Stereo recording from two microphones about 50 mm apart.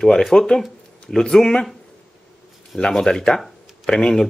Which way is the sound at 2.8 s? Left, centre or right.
Centre.